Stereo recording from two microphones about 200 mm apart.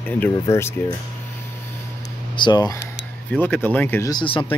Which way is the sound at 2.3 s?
20° left (ahead or behind).